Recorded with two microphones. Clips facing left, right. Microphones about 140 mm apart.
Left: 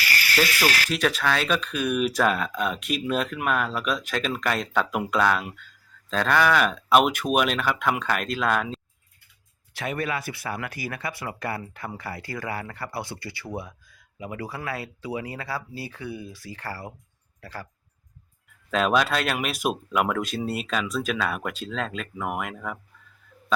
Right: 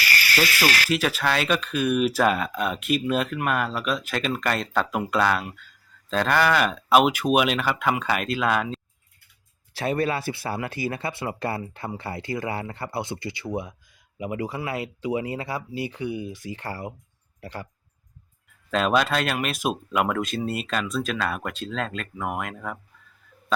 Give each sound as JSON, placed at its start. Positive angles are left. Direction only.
{"t": 0.0, "sound": "insect", "side_deg": -90}
{"t": 0.9, "sound": "speech", "side_deg": -5}
{"t": 9.7, "sound": "speech", "side_deg": -30}
{"t": 18.7, "sound": "speech", "side_deg": 0}